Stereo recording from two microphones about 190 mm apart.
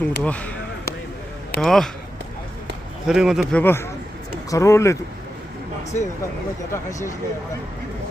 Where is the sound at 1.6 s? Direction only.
Centre (ahead or behind).